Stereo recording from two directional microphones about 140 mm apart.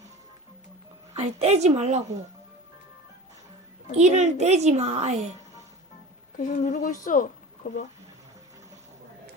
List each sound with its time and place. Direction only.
1.1 s a woman's voice: 50° right (ahead or behind)
3.9 s a woman's voice: 55° right (ahead or behind)
6.3 s a woman's voice: 75° left (ahead or behind)
6.6 s a woman's voice: 60° left (ahead or behind)
7.6 s speech: 90° left